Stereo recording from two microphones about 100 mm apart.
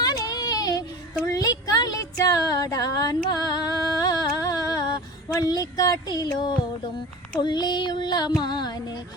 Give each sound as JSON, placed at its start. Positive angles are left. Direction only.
{"t": 0.0, "sound": "a sound", "side_deg": 40}
{"t": 5.4, "sound": "speech", "side_deg": 40}
{"t": 7.3, "sound": "child singing", "side_deg": 45}